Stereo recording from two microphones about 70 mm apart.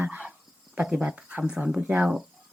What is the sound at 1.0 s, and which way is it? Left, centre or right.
Speech, centre.